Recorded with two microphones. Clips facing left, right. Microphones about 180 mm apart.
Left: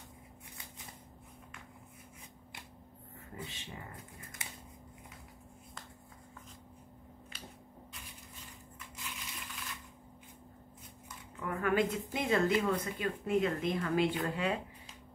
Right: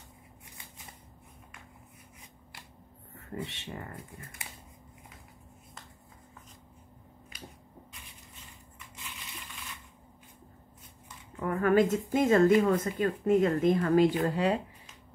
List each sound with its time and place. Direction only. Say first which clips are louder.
3.2 s speech: right 7 dB; 75° right (ahead or behind)
11.3 s a woman's voice: right 7 dB; 45° right (ahead or behind)